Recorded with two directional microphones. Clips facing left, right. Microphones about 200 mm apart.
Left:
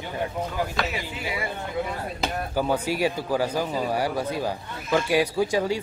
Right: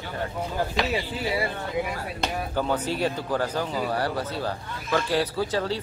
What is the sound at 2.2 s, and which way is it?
Speech, 5° left (ahead or behind).